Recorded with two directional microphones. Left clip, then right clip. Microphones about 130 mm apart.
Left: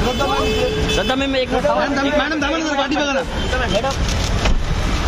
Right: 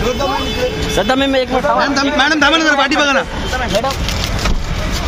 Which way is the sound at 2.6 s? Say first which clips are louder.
Right 7 dB; 90° right.